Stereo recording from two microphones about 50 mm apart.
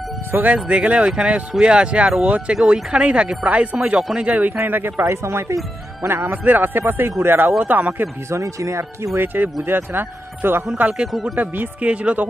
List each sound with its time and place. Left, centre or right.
0.3 s speech: right
0.8 s speech: right
4.6 s speech: right
5.0 s speech: right
6.0 s speech: right
6.3 s speech: right
7.6 s speech: right
8.3 s speech: right
9.2 s speech: right
11.1 s speech: centre
11.3 s speech: right
11.8 s speech: right